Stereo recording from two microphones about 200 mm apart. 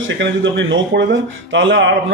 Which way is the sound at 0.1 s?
65° right (ahead or behind).